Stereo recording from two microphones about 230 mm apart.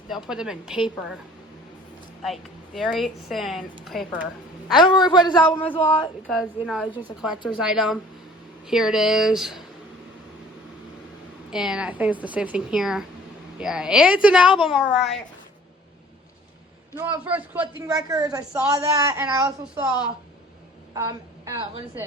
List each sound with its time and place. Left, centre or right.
0.3 s a woman's voice: centre
2.2 s a woman's voice: centre
4.8 s a man's voice: centre
6.2 s a woman's voice: centre
11.5 s a woman's voice: centre
16.9 s a woman's voice: centre
20.9 s a woman's voice: centre